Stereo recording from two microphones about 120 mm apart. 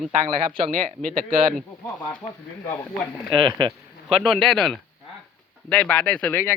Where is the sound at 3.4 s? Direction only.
40° right (ahead or behind).